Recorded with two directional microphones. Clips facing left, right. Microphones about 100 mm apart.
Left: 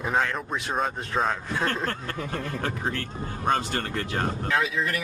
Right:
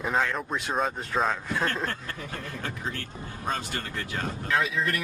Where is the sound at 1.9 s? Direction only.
50° left (ahead or behind).